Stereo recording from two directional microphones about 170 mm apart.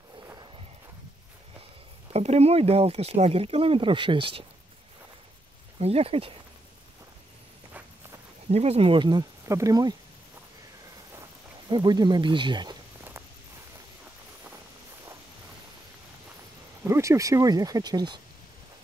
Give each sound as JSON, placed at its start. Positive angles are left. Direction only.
{"t": 2.1, "sound": "speech", "side_deg": -35}
{"t": 5.8, "sound": "speech", "side_deg": -35}
{"t": 8.5, "sound": "speech", "side_deg": -35}
{"t": 11.7, "sound": "speech", "side_deg": -25}
{"t": 16.8, "sound": "speech", "side_deg": -15}